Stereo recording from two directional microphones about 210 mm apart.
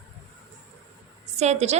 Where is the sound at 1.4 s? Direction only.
30° right (ahead or behind).